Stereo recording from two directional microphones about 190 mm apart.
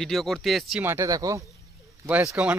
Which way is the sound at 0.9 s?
15° right (ahead or behind).